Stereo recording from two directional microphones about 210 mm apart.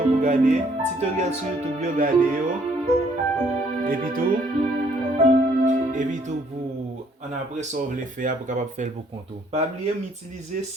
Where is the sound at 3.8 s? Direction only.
40° right (ahead or behind).